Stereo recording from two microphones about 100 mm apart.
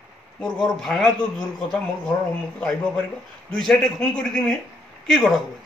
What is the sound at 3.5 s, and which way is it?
A man's voice, 5° left (ahead or behind).